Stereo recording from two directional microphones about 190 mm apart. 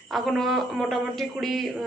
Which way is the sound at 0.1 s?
Centre (ahead or behind).